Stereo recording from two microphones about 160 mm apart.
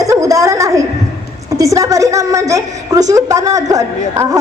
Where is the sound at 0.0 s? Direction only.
20° right (ahead or behind).